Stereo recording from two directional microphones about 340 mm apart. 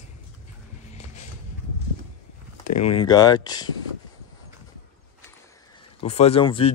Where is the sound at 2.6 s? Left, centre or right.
Left.